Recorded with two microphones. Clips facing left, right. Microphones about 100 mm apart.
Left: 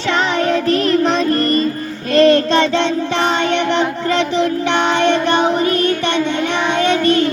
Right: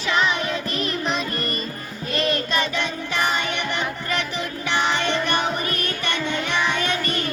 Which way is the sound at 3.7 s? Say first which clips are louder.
Left 10 dB; 25° left (ahead or behind).